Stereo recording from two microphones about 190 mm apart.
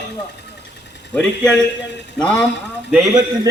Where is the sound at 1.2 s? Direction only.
5° left (ahead or behind).